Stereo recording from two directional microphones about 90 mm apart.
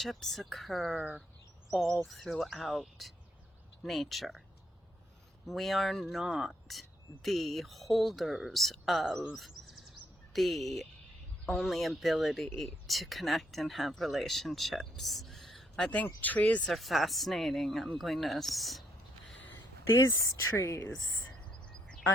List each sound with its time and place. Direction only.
0.0 s speech: centre (ahead or behind)
2.0 s speech: centre (ahead or behind)
5.5 s speech: centre (ahead or behind)
16.6 s speech: centre (ahead or behind)
20.1 s speech: 40° left (ahead or behind)
21.7 s quack: 10° left (ahead or behind)